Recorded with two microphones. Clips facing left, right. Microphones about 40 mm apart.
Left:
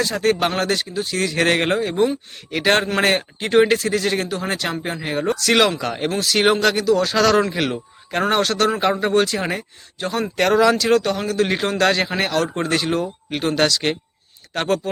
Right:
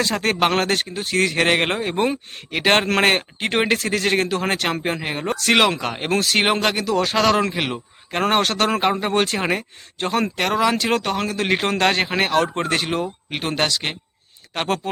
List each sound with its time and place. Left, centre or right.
0.0 s speech: right
1.4 s a man's voice: right
4.8 s a man's voice: right
6.3 s a man's voice: right
7.5 s speech: right
8.3 s a man's voice: right
8.8 s a man's voice: right
9.1 s speech: right
10.3 s a man's voice: centre
10.8 s a man's voice: right